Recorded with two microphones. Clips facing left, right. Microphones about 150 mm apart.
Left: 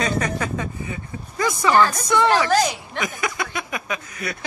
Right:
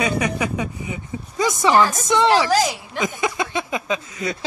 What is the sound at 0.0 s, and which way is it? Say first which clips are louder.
A woman's voice: right 2 dB; 10° right (ahead or behind).